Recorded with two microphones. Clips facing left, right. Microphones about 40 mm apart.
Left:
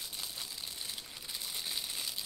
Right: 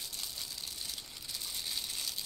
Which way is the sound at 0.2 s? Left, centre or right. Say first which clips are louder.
Left 1 dB; centre.